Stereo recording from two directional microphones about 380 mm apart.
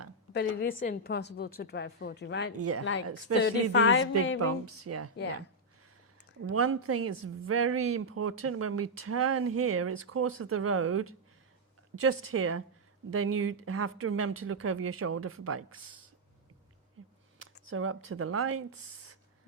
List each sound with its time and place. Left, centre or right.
0.3 s a woman's voice: left
2.6 s a woman's voice: right
3.4 s a woman's voice: left
4.4 s a woman's voice: right
6.4 s a woman's voice: right
17.7 s a woman's voice: right